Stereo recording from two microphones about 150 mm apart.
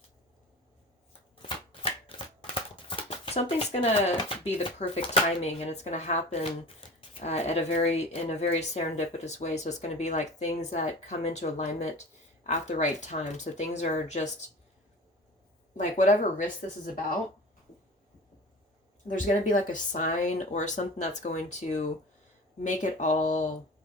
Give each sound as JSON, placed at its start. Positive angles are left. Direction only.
{"t": 1.4, "sound": "shuffling cards", "side_deg": 35}
{"t": 2.8, "sound": "speech", "side_deg": 40}
{"t": 15.8, "sound": "speech", "side_deg": 55}
{"t": 16.8, "sound": "speech", "side_deg": 70}
{"t": 19.0, "sound": "speech", "side_deg": 60}